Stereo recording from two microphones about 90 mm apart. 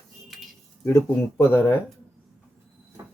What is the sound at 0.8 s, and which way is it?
Speech, 35° left (ahead or behind).